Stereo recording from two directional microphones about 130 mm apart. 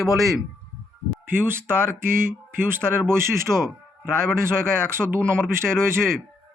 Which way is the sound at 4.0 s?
20° right (ahead or behind).